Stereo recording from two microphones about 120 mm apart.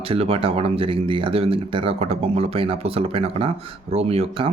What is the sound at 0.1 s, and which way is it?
Speech, 55° right (ahead or behind).